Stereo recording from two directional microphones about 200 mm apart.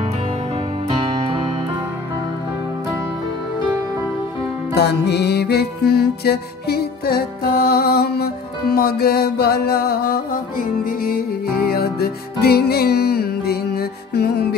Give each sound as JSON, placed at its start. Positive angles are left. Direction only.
{"t": 0.8, "sound": "music", "side_deg": -25}
{"t": 4.7, "sound": "music", "side_deg": 55}